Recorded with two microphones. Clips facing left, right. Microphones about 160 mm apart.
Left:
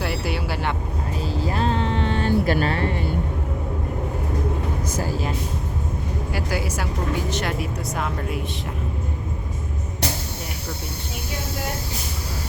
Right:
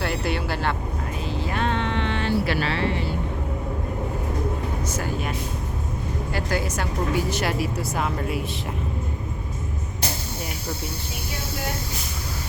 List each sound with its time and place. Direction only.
0.0 s vehicle: 10° left (ahead or behind)
1.3 s vehicle: 35° left (ahead or behind)
4.9 s speech: 35° left (ahead or behind)
6.3 s a woman's voice: 10° left (ahead or behind)
7.3 s speech: 5° right (ahead or behind)